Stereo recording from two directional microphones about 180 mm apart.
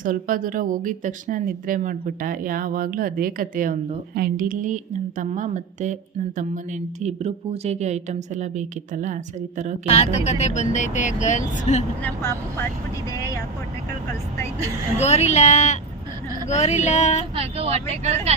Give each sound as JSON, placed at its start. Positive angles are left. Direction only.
{"t": 0.0, "sound": "speech", "side_deg": -50}
{"t": 9.9, "sound": "speech", "side_deg": 40}
{"t": 12.0, "sound": "speech", "side_deg": 15}
{"t": 15.0, "sound": "speech", "side_deg": 40}
{"t": 17.3, "sound": "speech", "side_deg": -35}